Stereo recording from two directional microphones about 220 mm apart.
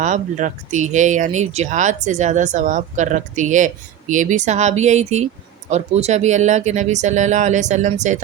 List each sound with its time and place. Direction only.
0.0 s speech: 35° right (ahead or behind)